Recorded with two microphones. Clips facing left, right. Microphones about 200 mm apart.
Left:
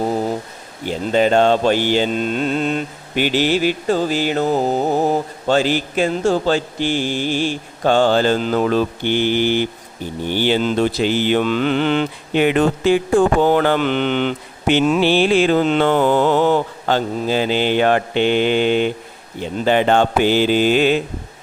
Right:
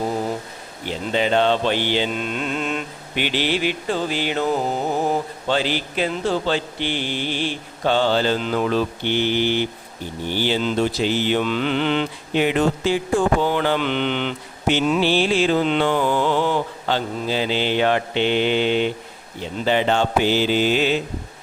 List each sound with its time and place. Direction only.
0.9 s mantra: 45° left (ahead or behind)